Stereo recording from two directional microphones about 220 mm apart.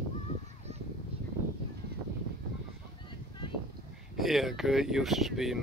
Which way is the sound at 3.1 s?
20° left (ahead or behind).